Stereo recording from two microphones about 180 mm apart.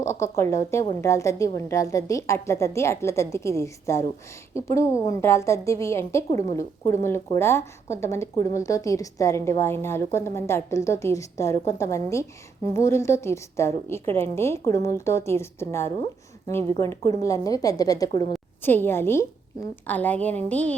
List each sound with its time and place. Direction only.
0.0 s speech: 15° left (ahead or behind)